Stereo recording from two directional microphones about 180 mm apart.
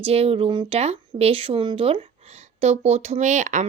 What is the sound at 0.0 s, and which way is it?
Speech, 35° right (ahead or behind).